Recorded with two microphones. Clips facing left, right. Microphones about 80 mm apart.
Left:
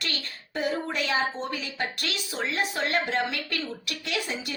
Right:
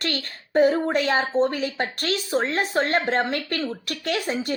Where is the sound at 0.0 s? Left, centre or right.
Right.